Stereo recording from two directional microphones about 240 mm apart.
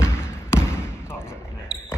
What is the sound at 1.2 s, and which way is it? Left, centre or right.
Basketball bounce, centre.